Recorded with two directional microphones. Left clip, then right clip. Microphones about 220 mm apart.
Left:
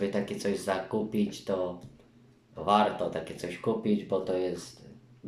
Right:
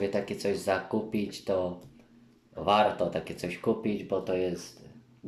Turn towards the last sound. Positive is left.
turn(degrees=-10)  # may be behind; listen again after turning